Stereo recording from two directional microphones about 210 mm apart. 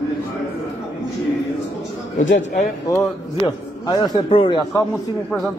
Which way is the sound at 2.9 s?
15° left (ahead or behind).